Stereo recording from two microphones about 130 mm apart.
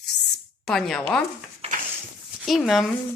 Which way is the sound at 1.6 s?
50° right (ahead or behind).